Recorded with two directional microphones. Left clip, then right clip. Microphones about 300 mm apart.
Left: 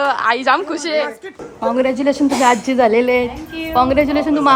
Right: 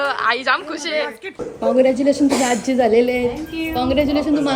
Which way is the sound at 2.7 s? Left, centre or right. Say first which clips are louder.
Left 3 dB; left.